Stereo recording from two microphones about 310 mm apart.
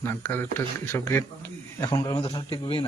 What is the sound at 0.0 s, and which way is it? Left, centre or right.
Speech, centre.